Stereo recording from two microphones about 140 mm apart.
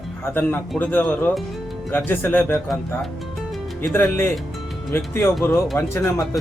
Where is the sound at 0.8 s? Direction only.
15° left (ahead or behind).